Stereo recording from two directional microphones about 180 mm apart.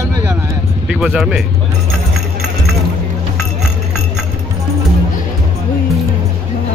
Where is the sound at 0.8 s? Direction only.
5° right (ahead or behind).